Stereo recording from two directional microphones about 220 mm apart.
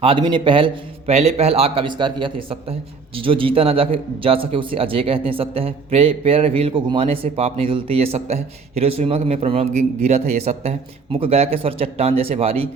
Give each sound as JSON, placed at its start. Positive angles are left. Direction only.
{"t": 0.0, "sound": "a man's voice", "side_deg": -25}